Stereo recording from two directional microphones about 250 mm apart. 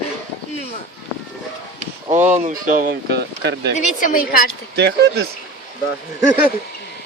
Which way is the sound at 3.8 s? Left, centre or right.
Left.